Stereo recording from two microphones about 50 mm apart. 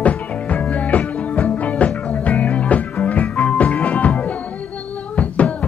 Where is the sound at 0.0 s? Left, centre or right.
Left.